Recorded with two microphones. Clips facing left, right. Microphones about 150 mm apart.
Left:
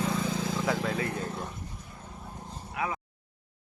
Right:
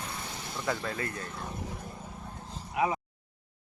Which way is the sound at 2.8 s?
20° right (ahead or behind).